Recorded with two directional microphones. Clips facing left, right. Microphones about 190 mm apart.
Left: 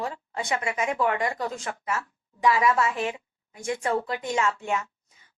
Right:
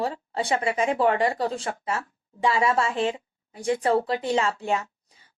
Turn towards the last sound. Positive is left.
turn(degrees=-35)  # may be behind; listen again after turning